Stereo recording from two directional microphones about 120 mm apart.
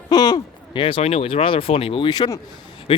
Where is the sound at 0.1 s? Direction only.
30° left (ahead or behind).